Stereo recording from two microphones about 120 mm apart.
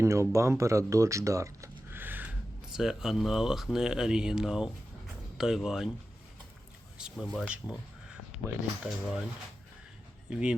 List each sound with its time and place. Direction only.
0.0 s speech: 25° right (ahead or behind)
2.7 s speech: 5° right (ahead or behind)
7.3 s speech: 10° right (ahead or behind)